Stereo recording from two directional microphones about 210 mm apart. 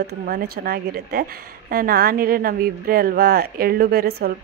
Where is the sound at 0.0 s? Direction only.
50° right (ahead or behind).